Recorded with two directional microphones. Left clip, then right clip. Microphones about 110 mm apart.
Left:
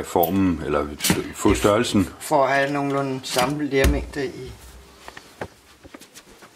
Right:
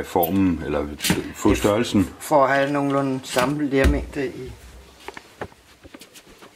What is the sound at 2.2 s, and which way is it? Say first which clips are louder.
Speech: right 2 dB; 20° right (ahead or behind).